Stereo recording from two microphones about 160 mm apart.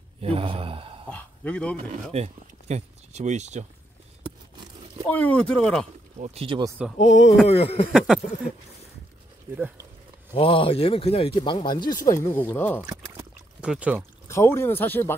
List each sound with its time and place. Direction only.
0.2 s a man's voice: 35° right (ahead or behind)
1.0 s speech: 10° left (ahead or behind)
1.9 s speech: 45° right (ahead or behind)
4.2 s a sound: 30° right (ahead or behind)
5.1 s speech: 10° left (ahead or behind)
6.1 s speech: 40° right (ahead or behind)
7.0 s speech: 45° left (ahead or behind)
10.3 s speech: 35° left (ahead or behind); by 12.8 s 15° left (ahead or behind)
13.6 s speech: 10° right (ahead or behind)
14.2 s speech: 15° left (ahead or behind)